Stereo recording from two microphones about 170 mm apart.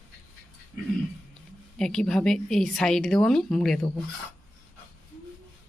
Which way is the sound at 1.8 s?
5° left (ahead or behind).